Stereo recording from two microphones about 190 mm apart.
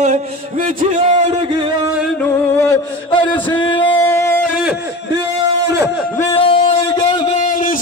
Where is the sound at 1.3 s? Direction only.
25° right (ahead or behind).